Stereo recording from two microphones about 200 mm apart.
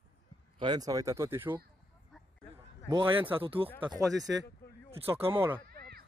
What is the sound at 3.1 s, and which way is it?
Speech, 10° right (ahead or behind).